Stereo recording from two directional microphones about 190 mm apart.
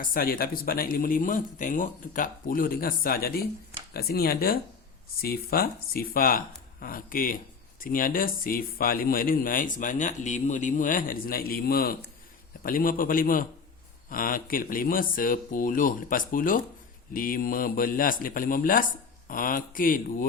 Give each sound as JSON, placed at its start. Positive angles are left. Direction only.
{"t": 0.0, "sound": "a man's voice", "side_deg": 50}